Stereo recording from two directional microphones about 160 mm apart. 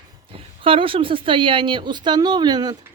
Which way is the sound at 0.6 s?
35° right (ahead or behind).